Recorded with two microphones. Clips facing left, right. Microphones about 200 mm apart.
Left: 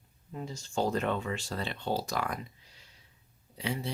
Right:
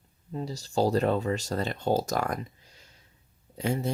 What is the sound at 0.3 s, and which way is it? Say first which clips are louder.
Speech: right 5 dB; 35° right (ahead or behind).